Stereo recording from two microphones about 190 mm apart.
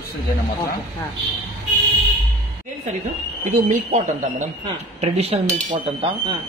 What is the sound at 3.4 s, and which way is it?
Speech, 40° right (ahead or behind).